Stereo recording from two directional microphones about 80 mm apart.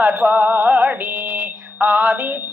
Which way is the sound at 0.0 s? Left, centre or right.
Centre.